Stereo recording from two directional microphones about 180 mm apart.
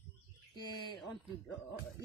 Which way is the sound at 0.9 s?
Centre (ahead or behind).